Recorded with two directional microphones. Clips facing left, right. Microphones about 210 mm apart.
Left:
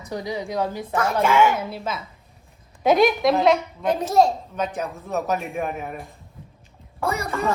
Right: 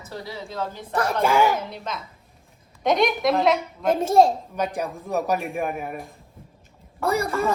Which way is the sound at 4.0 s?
25° right (ahead or behind).